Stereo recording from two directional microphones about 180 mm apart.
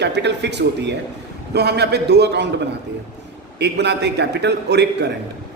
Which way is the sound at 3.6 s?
70° right (ahead or behind).